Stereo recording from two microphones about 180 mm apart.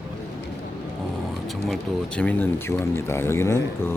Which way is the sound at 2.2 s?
10° left (ahead or behind).